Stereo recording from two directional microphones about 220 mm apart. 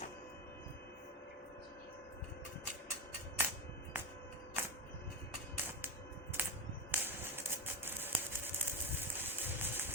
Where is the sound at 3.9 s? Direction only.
10° right (ahead or behind).